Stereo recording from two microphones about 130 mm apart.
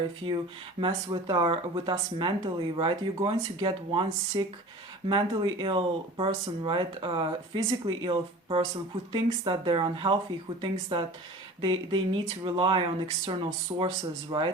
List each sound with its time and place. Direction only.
0.8 s speech: 35° right (ahead or behind)